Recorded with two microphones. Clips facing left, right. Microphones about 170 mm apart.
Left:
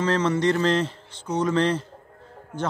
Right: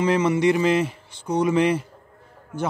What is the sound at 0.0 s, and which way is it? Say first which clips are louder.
A man's voice: right 3 dB; 10° right (ahead or behind).